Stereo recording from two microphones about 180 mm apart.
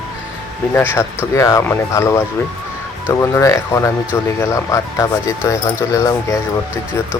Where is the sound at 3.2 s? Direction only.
15° left (ahead or behind).